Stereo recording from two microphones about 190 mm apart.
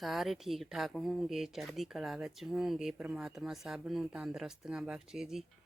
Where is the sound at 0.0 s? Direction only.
Centre (ahead or behind).